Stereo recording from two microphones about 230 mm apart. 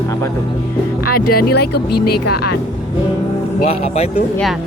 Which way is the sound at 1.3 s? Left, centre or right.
Left.